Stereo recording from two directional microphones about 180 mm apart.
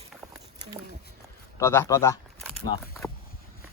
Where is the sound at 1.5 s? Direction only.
15° left (ahead or behind).